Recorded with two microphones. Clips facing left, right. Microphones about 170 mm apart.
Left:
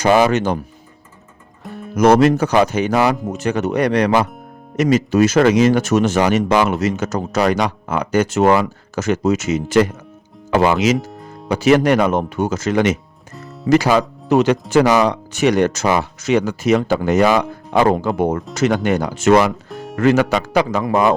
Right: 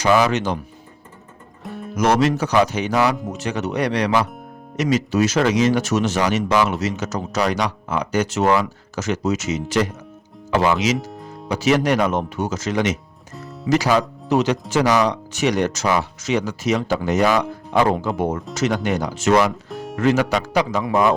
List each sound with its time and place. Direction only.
0.0 s speech: 55° left (ahead or behind)
1.6 s music: centre (ahead or behind)
2.0 s speech: 55° left (ahead or behind)
19.7 s music: centre (ahead or behind)
20.0 s speech: 55° left (ahead or behind)